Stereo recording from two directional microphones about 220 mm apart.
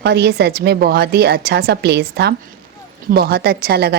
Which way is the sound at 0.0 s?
50° right (ahead or behind).